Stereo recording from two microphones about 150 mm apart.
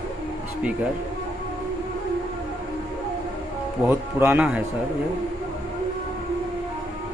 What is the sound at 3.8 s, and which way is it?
Speech, 15° right (ahead or behind).